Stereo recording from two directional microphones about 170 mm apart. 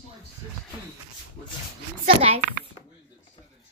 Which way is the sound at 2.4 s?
50° right (ahead or behind).